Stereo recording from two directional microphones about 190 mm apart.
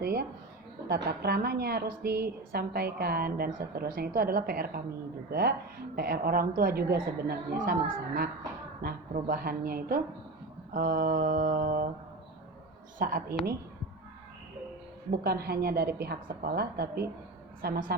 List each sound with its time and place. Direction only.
0.0 s a woman's voice: 55° right (ahead or behind)
8.8 s a woman's voice: 50° right (ahead or behind)
13.0 s a woman's voice: 45° right (ahead or behind)
15.1 s a woman's voice: 55° right (ahead or behind)